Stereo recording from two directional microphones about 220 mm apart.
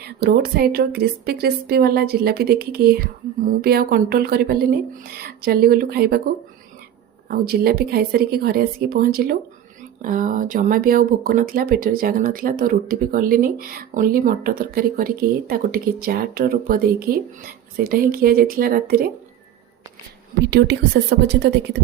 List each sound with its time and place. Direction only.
0.0 s a woman's voice: 45° right (ahead or behind)
7.3 s a woman's voice: 45° right (ahead or behind)
20.4 s a woman's voice: 50° right (ahead or behind)